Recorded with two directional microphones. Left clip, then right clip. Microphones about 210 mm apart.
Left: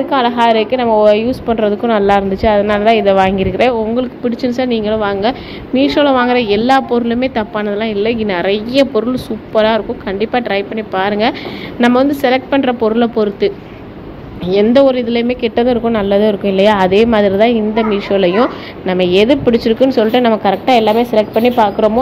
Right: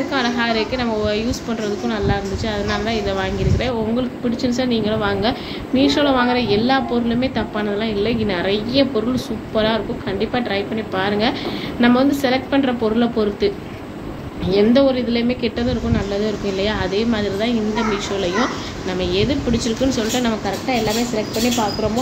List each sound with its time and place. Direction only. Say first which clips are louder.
0.1 s a woman's voice: left 10 dB; 30° left (ahead or behind)
14.5 s a woman's voice: left 6 dB; 35° left (ahead or behind)